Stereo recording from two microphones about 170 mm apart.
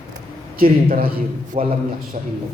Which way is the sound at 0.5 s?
60° right (ahead or behind).